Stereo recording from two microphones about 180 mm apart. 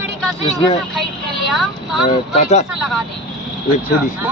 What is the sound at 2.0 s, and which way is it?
Speech, 40° left (ahead or behind).